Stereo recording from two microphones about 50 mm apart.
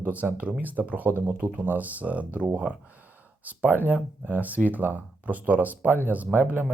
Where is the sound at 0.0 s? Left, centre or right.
Right.